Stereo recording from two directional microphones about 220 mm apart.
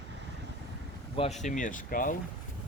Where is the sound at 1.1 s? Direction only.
30° left (ahead or behind).